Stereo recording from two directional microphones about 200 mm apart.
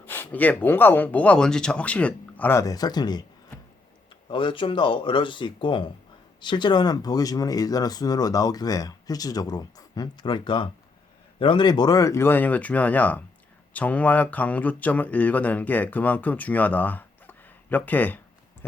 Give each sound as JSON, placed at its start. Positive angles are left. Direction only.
{"t": 0.0, "sound": "speech", "side_deg": 10}
{"t": 4.3, "sound": "speech", "side_deg": 25}